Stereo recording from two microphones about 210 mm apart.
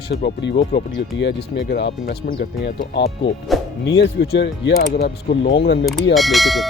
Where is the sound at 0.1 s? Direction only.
50° left (ahead or behind).